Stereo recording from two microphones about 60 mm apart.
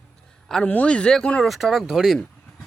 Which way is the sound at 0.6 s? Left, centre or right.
Left.